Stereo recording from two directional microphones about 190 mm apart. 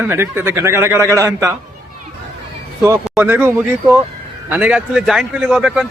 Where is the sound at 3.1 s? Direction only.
10° right (ahead or behind).